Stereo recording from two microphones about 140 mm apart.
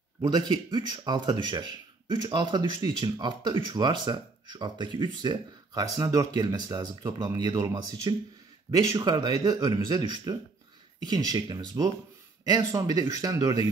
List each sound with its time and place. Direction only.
0.2 s speech: 30° right (ahead or behind)